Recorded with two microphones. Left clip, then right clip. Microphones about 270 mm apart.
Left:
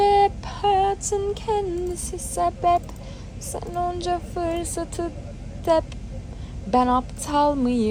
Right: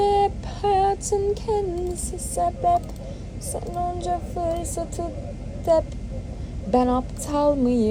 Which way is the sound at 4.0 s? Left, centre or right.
Left.